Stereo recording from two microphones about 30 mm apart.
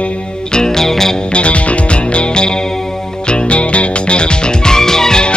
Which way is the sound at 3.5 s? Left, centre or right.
Left.